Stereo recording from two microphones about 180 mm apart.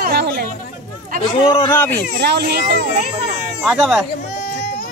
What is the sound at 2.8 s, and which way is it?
Speech, 40° right (ahead or behind).